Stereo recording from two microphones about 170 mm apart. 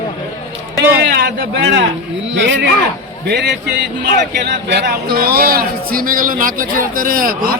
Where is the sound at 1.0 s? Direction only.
75° right (ahead or behind).